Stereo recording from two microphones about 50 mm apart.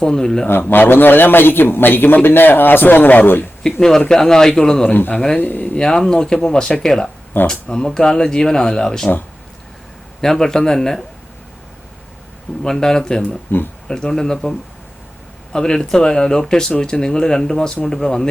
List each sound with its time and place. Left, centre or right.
0.0 s speech: centre
0.7 s a man's voice: left
3.8 s speech: centre
5.4 s speech: left
5.7 s speech: centre
10.2 s speech: centre
12.6 s speech: centre
15.5 s speech: centre